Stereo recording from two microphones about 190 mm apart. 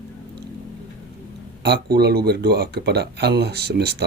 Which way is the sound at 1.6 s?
60° right (ahead or behind).